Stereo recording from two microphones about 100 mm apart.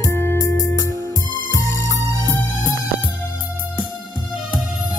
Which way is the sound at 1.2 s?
40° right (ahead or behind).